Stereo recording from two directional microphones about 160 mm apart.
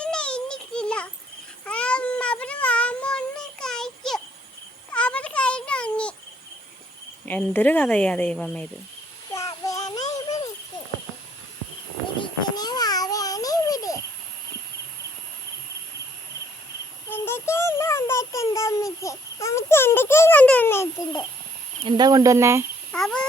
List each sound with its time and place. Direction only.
0.0 s a sound: 5° left (ahead or behind)
1.6 s cat: 5° left (ahead or behind)
4.9 s a sound: 5° left (ahead or behind)
7.3 s speech: 10° left (ahead or behind)
9.3 s child singing: 20° left (ahead or behind)
10.2 s a sound: 25° left (ahead or behind)
12.2 s babbling: 25° left (ahead or behind)
17.1 s child singing: 15° left (ahead or behind)
19.0 s a child's voice: 20° left (ahead or behind)
21.8 s speech: 25° right (ahead or behind)
22.9 s cat: 5° left (ahead or behind)